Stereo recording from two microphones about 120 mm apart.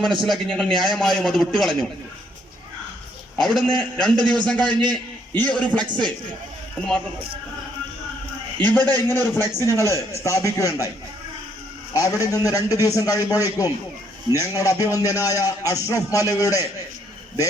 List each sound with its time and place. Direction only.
0.2 s a man's voice: 5° left (ahead or behind)
3.3 s a man's voice: centre (ahead or behind)
8.5 s a man's voice: 15° left (ahead or behind)
11.9 s a man's voice: 25° left (ahead or behind)